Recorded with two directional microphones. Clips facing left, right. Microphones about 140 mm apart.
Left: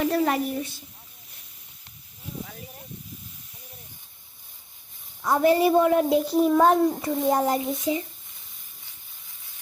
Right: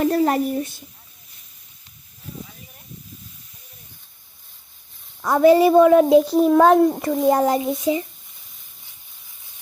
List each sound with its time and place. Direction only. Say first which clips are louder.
0.0 s a woman's voice: right 5 dB; 45° right (ahead or behind)
5.2 s a child's voice: right 6 dB; 90° right